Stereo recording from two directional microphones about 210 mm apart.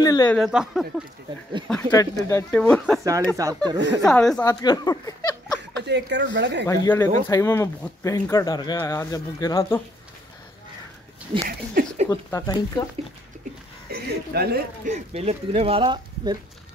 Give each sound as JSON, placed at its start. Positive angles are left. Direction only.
{"t": 0.0, "sound": "speech", "side_deg": 20}
{"t": 0.3, "sound": "speech", "side_deg": 0}
{"t": 1.9, "sound": "speech", "side_deg": 15}
{"t": 3.0, "sound": "speech", "side_deg": -15}
{"t": 4.0, "sound": "speech", "side_deg": 0}
{"t": 4.5, "sound": "speech", "side_deg": 20}
{"t": 5.9, "sound": "speech", "side_deg": -55}
{"t": 6.7, "sound": "speech", "side_deg": 10}
{"t": 11.4, "sound": "speech", "side_deg": -40}
{"t": 12.1, "sound": "speech", "side_deg": 15}
{"t": 14.0, "sound": "speech", "side_deg": -50}
{"t": 14.9, "sound": "speech", "side_deg": -30}